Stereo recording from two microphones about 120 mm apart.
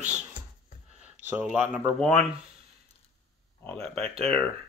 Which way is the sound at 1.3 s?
10° right (ahead or behind).